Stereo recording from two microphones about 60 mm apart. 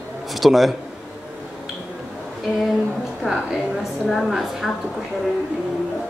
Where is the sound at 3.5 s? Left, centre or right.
Centre.